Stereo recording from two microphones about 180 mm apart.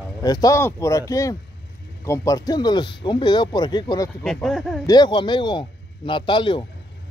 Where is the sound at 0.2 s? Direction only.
20° left (ahead or behind).